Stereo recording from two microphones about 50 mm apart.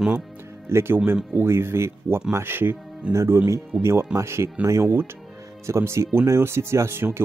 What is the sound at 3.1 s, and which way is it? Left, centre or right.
Speech, right.